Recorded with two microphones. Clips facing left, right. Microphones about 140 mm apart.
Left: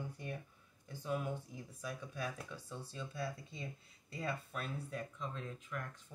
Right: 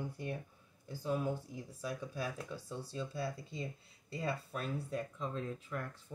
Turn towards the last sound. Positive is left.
turn(degrees=-35)  # may be behind; listen again after turning